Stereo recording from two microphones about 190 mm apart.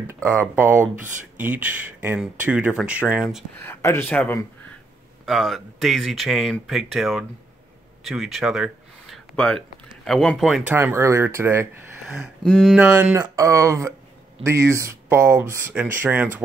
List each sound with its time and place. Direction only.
0.0 s speech: 15° right (ahead or behind)
3.5 s speech: 10° left (ahead or behind)
8.0 s a sound: centre (ahead or behind)
10.0 s speech: centre (ahead or behind)
12.4 s speech: 5° left (ahead or behind)